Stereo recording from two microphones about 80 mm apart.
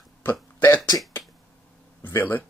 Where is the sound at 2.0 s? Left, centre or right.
Left.